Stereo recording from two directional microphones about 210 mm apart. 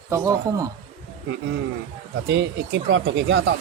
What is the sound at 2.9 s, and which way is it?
Speech, 60° right (ahead or behind).